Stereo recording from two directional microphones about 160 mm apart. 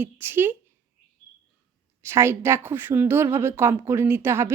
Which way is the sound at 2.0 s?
15° right (ahead or behind).